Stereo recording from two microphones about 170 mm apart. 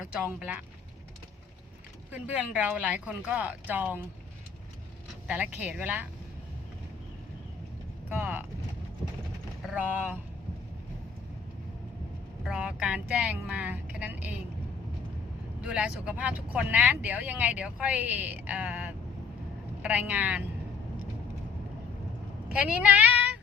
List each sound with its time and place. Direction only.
0.3 s speech: 10° right (ahead or behind)
2.1 s speech: 10° right (ahead or behind)
5.3 s speech: 10° right (ahead or behind)
8.1 s speech: 10° right (ahead or behind)
9.6 s speech: 10° right (ahead or behind)
12.5 s speech: 5° right (ahead or behind)
15.6 s speech: 5° right (ahead or behind)
22.5 s speech: 10° right (ahead or behind)